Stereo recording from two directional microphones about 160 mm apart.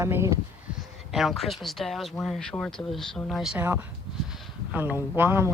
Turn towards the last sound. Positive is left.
turn(degrees=-15)  # may be behind; listen again after turning